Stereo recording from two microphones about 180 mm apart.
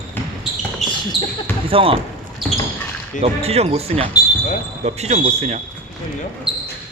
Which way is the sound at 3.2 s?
35° right (ahead or behind).